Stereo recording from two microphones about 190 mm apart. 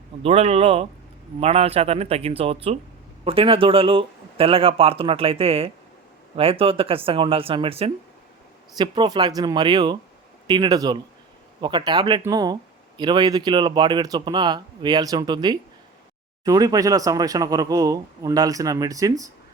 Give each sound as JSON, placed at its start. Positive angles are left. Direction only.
{"t": 0.2, "sound": "speech", "side_deg": -35}